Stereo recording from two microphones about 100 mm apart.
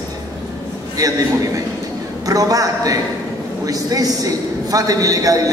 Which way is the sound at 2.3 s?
35° right (ahead or behind).